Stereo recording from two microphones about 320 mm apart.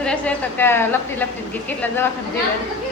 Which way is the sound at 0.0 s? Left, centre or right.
Centre.